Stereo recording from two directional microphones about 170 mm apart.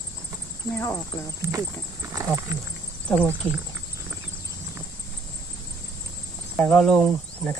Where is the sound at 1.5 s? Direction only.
20° right (ahead or behind).